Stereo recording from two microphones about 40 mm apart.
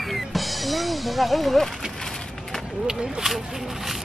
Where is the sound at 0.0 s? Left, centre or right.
Centre.